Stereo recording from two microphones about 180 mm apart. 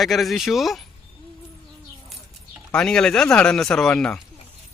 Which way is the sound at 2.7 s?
5° left (ahead or behind).